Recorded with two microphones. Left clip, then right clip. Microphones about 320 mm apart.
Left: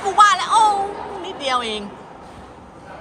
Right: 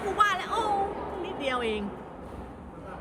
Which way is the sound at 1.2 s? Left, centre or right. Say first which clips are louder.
Left 9 dB; centre.